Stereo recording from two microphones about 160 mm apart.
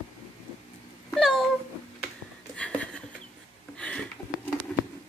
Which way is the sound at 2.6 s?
10° left (ahead or behind).